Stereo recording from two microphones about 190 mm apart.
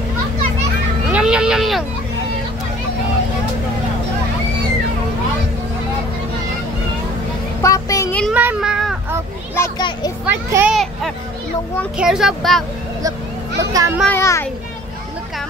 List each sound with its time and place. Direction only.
1.1 s speech: 5° right (ahead or behind)
7.6 s child singing: 15° left (ahead or behind)
8.2 s child singing: 5° right (ahead or behind)
9.6 s children playing: 20° left (ahead or behind)
10.2 s a child's voice: 10° right (ahead or behind)
13.6 s a child's voice: 15° right (ahead or behind)
14.1 s a child's voice: 15° left (ahead or behind)